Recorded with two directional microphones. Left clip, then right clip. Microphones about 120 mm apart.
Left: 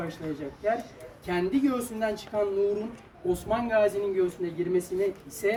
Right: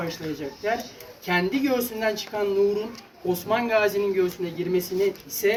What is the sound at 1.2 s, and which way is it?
Speech, 5° left (ahead or behind).